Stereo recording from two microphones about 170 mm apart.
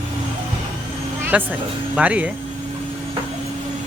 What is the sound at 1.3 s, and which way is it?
Speech, 10° right (ahead or behind).